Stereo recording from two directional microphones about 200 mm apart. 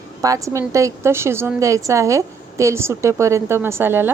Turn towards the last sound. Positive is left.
turn(degrees=-10)  # may be behind; listen again after turning